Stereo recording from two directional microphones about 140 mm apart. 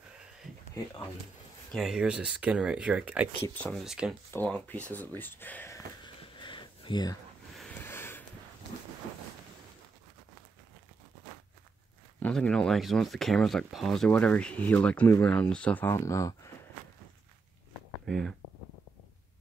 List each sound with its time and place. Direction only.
0.8 s speech: 20° left (ahead or behind)
1.7 s speech: centre (ahead or behind)
3.4 s speech: 15° left (ahead or behind)
3.7 s speech: 5° right (ahead or behind)
4.3 s speech: 10° left (ahead or behind)
6.0 s a sound: 35° left (ahead or behind)
7.8 s a sound: 15° left (ahead or behind)
12.2 s speech: 5° left (ahead or behind)
18.0 s speech: centre (ahead or behind)